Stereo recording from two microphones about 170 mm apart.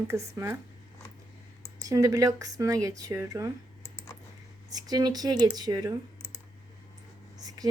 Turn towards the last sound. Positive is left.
turn(degrees=-20)  # may be behind; listen again after turning